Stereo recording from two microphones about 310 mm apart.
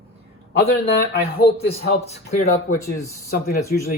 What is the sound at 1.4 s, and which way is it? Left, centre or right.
Speech, centre.